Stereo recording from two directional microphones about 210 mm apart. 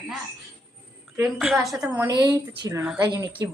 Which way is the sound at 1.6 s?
Centre (ahead or behind).